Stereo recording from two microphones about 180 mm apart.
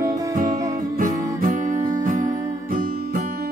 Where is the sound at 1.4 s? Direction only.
45° right (ahead or behind).